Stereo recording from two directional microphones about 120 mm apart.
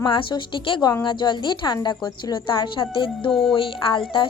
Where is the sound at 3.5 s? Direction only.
45° left (ahead or behind).